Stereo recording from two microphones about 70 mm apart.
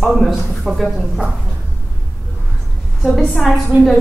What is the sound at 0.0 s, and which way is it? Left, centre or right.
A woman's voice, centre.